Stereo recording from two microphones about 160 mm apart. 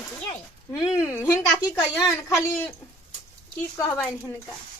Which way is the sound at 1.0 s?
15° left (ahead or behind).